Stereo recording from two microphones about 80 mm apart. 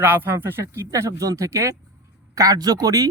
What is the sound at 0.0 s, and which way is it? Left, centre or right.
Speech, right.